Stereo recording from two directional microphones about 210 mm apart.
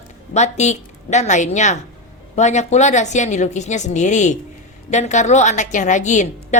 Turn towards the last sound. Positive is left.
turn(degrees=35)  # may be behind; listen again after turning